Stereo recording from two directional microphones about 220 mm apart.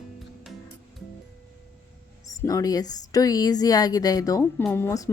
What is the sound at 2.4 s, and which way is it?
Speech, 15° left (ahead or behind).